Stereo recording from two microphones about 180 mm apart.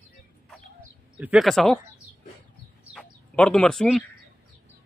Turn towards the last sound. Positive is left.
turn(degrees=0)  # may be behind; listen again after turning